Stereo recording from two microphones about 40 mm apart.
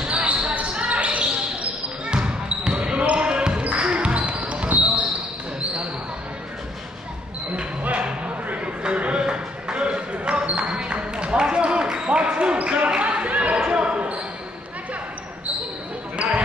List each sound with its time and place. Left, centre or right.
0.0 s basketball bounce: right
2.0 s a sound: right
3.6 s basketball bounce: right
8.5 s a sound: right
12.6 s basketball bounce: right
16.2 s basketball bounce: right